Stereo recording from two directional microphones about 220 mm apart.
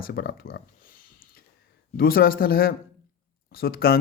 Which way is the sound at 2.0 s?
40° left (ahead or behind).